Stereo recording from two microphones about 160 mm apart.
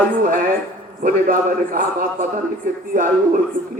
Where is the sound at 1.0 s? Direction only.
60° right (ahead or behind).